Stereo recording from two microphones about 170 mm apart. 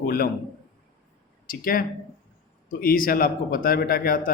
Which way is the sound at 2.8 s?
60° left (ahead or behind).